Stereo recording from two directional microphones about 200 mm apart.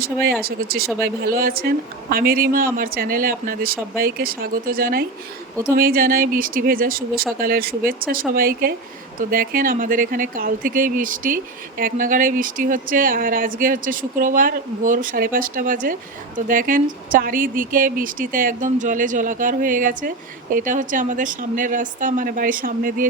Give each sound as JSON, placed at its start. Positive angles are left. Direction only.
{"t": 0.0, "sound": "speech", "side_deg": -50}